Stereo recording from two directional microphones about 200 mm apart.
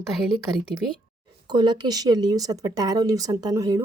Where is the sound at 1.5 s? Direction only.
20° right (ahead or behind).